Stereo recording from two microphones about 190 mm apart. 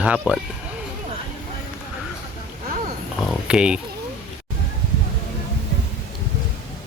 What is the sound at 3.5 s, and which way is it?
Speech, 5° right (ahead or behind).